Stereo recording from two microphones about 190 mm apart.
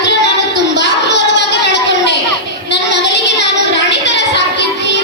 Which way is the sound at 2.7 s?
65° left (ahead or behind).